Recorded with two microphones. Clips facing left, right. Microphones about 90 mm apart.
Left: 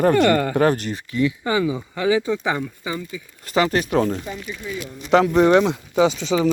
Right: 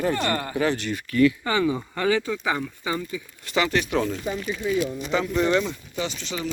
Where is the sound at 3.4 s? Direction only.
40° left (ahead or behind).